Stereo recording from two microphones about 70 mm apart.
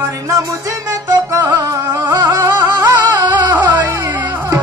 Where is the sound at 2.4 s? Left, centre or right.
Right.